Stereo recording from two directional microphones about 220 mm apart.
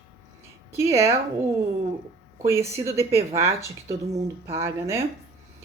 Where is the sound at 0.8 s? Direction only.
10° right (ahead or behind).